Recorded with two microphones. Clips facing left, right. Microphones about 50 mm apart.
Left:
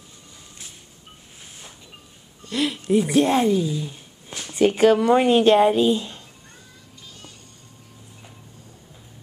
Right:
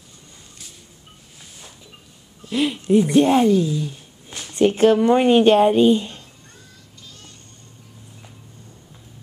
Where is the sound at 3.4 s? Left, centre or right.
Centre.